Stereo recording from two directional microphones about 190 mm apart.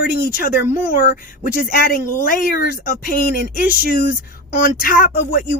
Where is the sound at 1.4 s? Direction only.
45° left (ahead or behind).